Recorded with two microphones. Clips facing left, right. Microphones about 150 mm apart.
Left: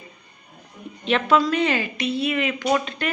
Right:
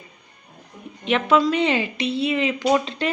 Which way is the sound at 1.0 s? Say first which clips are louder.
Right 1 dB; 20° right (ahead or behind).